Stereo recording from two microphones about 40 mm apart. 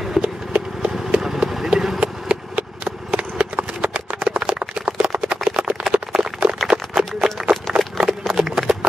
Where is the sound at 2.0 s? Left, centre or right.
Right.